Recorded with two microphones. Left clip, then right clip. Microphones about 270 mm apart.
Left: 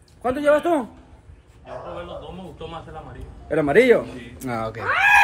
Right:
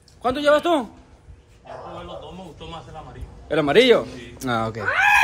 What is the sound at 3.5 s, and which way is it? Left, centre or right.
Speech, centre.